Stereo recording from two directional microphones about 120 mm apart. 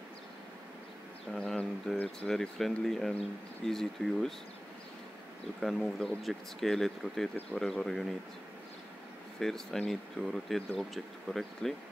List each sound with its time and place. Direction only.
1.3 s speech: 5° left (ahead or behind)
5.6 s speech: centre (ahead or behind)
9.4 s speech: 5° left (ahead or behind)